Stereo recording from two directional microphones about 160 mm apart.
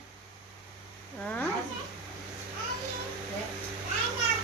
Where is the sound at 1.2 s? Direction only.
5° left (ahead or behind).